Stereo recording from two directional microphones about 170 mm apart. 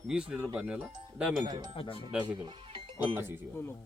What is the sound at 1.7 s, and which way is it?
Speech, 30° left (ahead or behind).